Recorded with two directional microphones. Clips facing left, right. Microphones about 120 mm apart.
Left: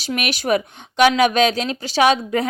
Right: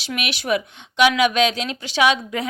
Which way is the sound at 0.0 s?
40° left (ahead or behind).